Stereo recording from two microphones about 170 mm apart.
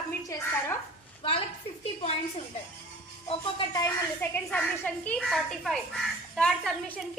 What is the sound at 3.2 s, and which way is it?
Speech, 30° left (ahead or behind).